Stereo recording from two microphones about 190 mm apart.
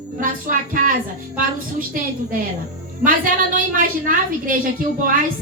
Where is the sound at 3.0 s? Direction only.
45° right (ahead or behind).